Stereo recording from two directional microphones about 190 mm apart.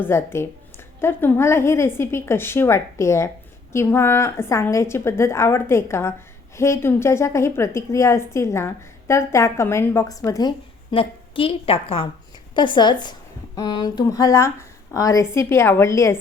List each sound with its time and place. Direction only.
0.0 s a woman's voice: 10° left (ahead or behind)
10.9 s a woman's voice: 30° left (ahead or behind)